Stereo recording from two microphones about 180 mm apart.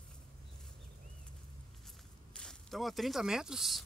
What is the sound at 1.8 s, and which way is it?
Walk, 5° left (ahead or behind).